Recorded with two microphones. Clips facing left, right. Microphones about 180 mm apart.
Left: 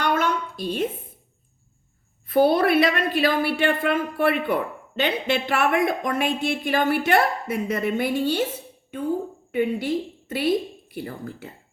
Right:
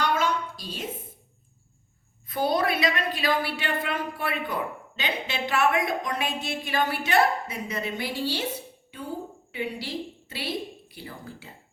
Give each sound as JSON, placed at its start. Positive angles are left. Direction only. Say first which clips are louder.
{"t": 0.0, "sound": "a sound", "louder": "left 3 dB", "side_deg": 55}
{"t": 2.2, "sound": "speech", "louder": "left 7 dB", "side_deg": 55}
{"t": 9.5, "sound": "a woman's voice", "louder": "left 10 dB", "side_deg": 50}